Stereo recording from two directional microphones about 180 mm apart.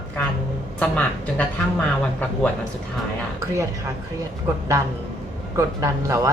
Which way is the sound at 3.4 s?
15° right (ahead or behind).